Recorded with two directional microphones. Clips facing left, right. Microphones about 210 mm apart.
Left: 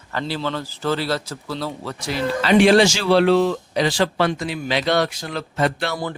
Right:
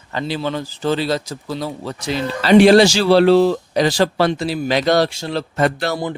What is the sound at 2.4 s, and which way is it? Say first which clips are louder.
Speech: right 4 dB; 35° right (ahead or behind).